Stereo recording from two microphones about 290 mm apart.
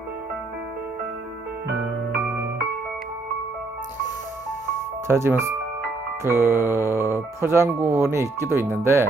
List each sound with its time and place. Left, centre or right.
5.0 s speech: centre